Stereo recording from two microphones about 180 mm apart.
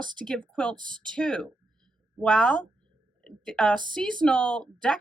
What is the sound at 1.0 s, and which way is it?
Speech, 5° left (ahead or behind).